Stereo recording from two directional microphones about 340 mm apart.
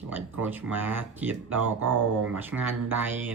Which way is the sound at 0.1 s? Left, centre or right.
Centre.